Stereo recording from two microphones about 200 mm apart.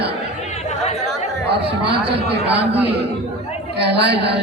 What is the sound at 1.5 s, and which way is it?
A woman's voice, 55° right (ahead or behind).